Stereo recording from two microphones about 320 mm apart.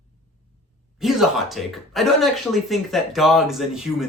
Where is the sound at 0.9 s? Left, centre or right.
Centre.